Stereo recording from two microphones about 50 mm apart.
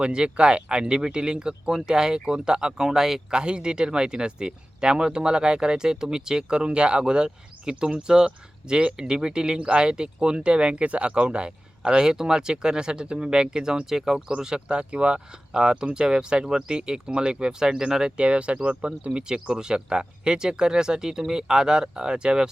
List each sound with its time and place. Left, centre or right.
0.0 s speech: centre
18.2 s speech: right